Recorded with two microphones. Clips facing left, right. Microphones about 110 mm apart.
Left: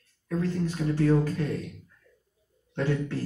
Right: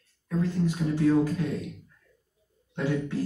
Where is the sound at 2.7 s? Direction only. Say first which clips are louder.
Even; 15° right (ahead or behind).